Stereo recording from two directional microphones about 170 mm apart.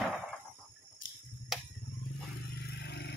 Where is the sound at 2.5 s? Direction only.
75° left (ahead or behind).